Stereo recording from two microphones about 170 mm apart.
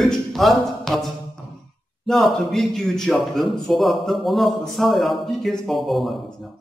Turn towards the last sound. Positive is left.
turn(degrees=0)  # may be behind; listen again after turning